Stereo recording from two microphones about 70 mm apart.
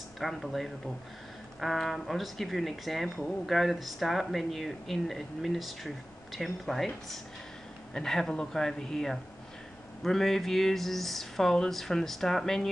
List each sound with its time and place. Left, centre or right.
0.2 s speech: centre
7.9 s speech: centre